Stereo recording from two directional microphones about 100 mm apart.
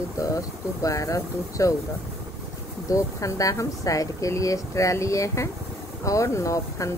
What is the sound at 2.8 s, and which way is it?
Speech, 35° left (ahead or behind).